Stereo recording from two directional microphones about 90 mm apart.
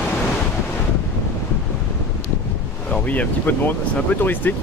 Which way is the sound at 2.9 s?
15° left (ahead or behind).